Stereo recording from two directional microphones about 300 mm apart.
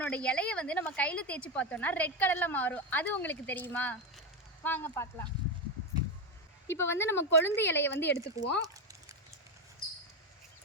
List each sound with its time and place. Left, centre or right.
0.0 s a woman's voice: centre
6.7 s speech: centre
7.9 s speech: left
8.6 s a sound: centre